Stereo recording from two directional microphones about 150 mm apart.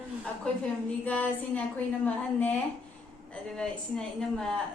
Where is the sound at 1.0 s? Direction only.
10° left (ahead or behind).